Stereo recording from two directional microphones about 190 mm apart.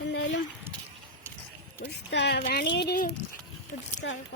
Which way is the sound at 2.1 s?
65° left (ahead or behind).